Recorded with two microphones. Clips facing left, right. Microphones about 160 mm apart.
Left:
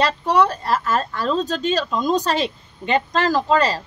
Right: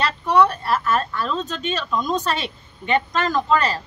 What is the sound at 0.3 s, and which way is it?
A woman's voice, 35° left (ahead or behind).